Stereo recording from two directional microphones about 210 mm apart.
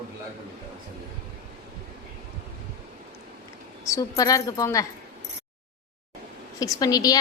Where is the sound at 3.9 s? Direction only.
15° left (ahead or behind).